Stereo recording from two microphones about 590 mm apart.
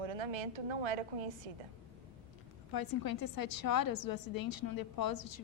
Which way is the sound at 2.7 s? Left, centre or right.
Left.